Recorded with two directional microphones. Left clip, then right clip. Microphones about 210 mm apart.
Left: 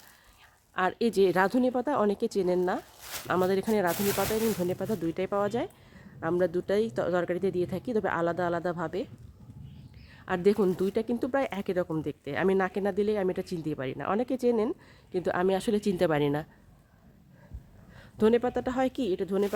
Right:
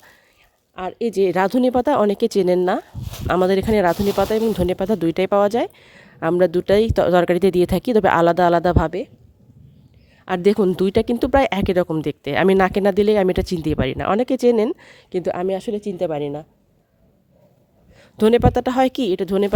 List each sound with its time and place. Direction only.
0.8 s speech: 5° right (ahead or behind)
1.1 s speech: 25° right (ahead or behind); by 9.0 s 45° right (ahead or behind)
10.2 s speech: 40° right (ahead or behind)
15.2 s a woman's voice: 20° right (ahead or behind); by 16.5 s centre (ahead or behind)
18.0 s speech: 45° right (ahead or behind)